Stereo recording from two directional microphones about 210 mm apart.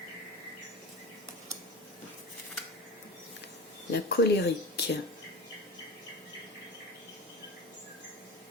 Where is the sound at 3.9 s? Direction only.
50° left (ahead or behind).